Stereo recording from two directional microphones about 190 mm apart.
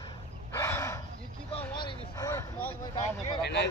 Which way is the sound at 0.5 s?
15° left (ahead or behind).